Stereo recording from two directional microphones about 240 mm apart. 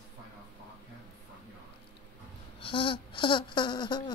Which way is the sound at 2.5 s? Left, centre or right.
Left.